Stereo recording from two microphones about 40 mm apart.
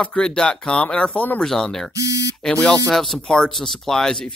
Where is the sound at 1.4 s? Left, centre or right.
Centre.